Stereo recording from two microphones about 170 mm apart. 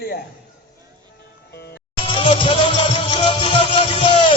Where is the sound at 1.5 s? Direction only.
75° left (ahead or behind).